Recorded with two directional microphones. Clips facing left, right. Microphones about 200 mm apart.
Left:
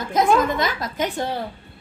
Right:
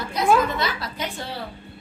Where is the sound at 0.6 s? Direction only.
45° left (ahead or behind).